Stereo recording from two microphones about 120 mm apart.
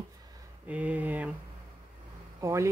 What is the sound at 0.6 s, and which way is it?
Speech, 10° right (ahead or behind).